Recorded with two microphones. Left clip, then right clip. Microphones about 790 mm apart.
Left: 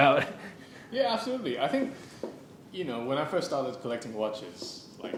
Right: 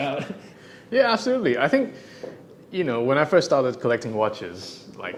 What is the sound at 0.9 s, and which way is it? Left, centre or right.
A man's voice, right.